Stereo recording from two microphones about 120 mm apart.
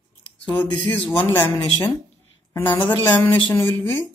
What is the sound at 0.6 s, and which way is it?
Speech, 10° left (ahead or behind).